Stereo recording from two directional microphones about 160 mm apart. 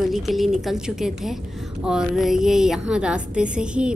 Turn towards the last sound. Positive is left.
turn(degrees=-5)  # may be behind; listen again after turning